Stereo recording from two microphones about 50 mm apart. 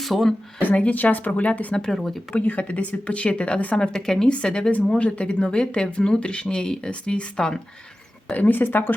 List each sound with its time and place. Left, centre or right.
0.0 s speech: centre
0.7 s speech: left
0.9 s speech: left
1.7 s speech: centre
2.3 s speech: left
3.8 s speech: centre
4.3 s speech: left
8.3 s speech: left